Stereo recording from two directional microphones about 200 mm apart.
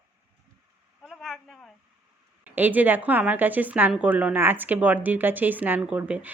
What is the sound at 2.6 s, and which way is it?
A woman's voice, 10° right (ahead or behind).